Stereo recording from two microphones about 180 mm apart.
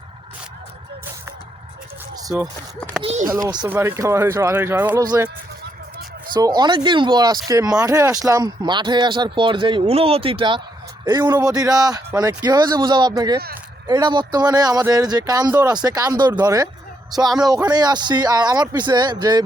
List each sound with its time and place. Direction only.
3.0 s speech: 35° right (ahead or behind)
3.7 s speech: 15° right (ahead or behind)
6.3 s speech: 25° right (ahead or behind)